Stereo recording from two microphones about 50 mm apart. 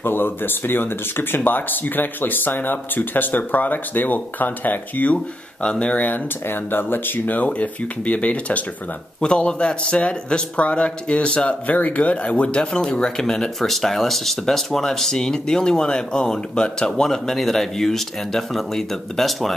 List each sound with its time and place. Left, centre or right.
0.0 s speech: left
6.0 s a man's voice: left; by 19.5 s centre